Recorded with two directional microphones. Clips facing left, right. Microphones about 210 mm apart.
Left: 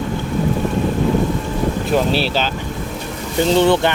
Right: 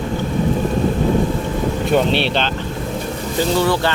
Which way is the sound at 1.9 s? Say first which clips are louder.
Right 2 dB; centre (ahead or behind).